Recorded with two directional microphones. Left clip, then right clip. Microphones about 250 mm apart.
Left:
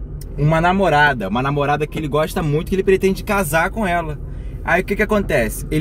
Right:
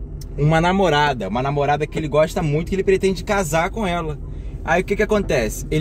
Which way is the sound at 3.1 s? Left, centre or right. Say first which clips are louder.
Left 1 dB; centre.